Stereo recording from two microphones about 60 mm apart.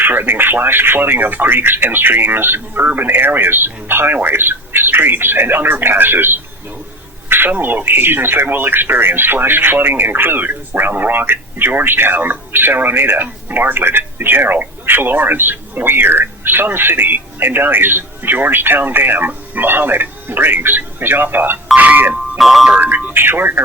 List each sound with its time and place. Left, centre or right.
0.0 s speech: right
7.3 s a sound: right
7.5 s speech: right
22.4 s speech: centre
22.8 s speech: right